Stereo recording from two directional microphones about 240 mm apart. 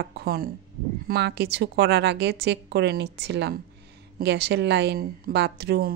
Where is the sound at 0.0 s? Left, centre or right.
Right.